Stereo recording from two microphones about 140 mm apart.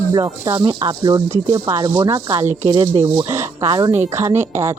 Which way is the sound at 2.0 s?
20° right (ahead or behind).